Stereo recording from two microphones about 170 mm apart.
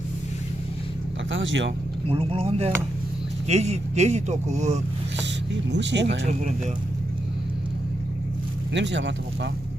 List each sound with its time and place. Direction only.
1.3 s speech: 90° right
2.0 s speech: 35° right (ahead or behind)
5.7 s speech: 90° right
8.7 s speech: 90° right